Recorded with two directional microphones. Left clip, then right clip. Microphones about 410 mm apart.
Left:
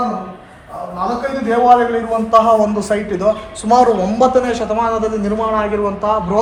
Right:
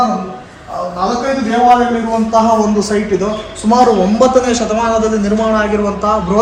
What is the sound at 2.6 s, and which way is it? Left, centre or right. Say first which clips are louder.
A man's voice: right 2 dB; left.